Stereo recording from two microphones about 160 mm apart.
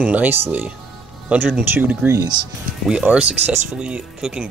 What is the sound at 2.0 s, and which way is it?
Speech, 20° right (ahead or behind).